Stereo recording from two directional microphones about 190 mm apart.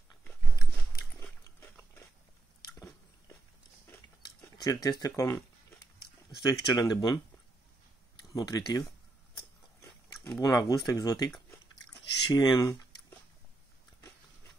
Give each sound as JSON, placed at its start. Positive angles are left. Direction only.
{"t": 1.2, "sound": "pig", "side_deg": 10}
{"t": 3.9, "sound": "a sound", "side_deg": 15}
{"t": 6.4, "sound": "speech", "side_deg": 20}
{"t": 8.2, "sound": "speech", "side_deg": 20}
{"t": 9.8, "sound": "dog", "side_deg": 15}
{"t": 10.9, "sound": "speech", "side_deg": 20}